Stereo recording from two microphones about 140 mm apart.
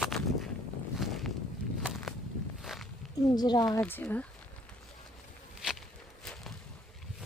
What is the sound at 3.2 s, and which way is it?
Speech, 30° left (ahead or behind).